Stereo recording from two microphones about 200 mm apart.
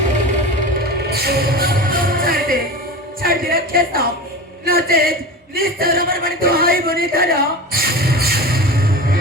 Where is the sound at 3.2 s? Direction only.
45° right (ahead or behind).